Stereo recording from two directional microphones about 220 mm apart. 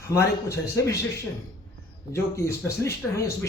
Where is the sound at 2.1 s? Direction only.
10° left (ahead or behind).